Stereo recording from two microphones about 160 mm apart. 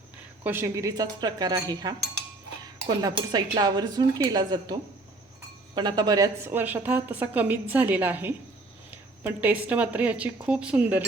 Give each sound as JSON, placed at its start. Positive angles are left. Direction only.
{"t": 0.4, "sound": "speech", "side_deg": -15}
{"t": 5.7, "sound": "speech", "side_deg": -25}
{"t": 6.5, "sound": "a woman's voice", "side_deg": -10}